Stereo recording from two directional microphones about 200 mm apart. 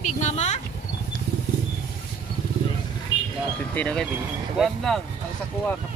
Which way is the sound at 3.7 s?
5° left (ahead or behind).